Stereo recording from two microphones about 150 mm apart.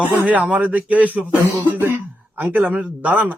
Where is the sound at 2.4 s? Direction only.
10° right (ahead or behind).